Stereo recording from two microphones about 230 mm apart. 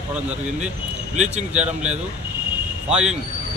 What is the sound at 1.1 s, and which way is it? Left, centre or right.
Speech, centre.